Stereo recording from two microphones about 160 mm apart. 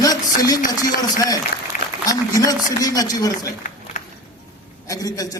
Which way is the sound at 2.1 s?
20° left (ahead or behind).